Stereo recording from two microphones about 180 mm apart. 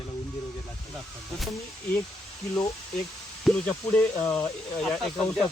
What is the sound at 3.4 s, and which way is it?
Speech, 5° left (ahead or behind).